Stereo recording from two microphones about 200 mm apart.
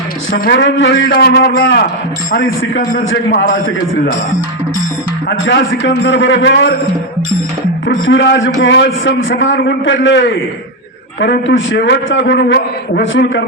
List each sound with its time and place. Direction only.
0.3 s a man's voice: 50° left (ahead or behind)
1.1 s a man's voice: 50° left (ahead or behind)
3.0 s a man's voice: 65° left (ahead or behind)
3.5 s a man's voice: 50° left (ahead or behind)
5.5 s a man's voice: 60° left (ahead or behind)
8.0 s a man's voice: 65° left (ahead or behind)